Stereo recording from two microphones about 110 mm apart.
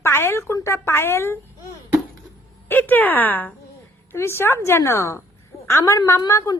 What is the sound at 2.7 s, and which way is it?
A woman's voice, 15° left (ahead or behind).